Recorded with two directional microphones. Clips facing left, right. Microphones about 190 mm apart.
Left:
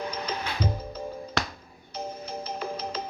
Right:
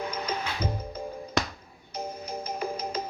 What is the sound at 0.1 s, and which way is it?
Music, 10° right (ahead or behind).